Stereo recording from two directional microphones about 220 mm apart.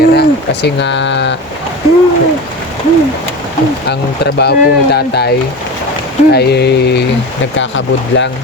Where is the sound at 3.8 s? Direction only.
50° left (ahead or behind).